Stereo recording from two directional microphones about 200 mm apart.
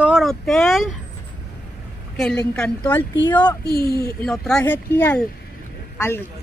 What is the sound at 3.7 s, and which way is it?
Speech, 50° left (ahead or behind).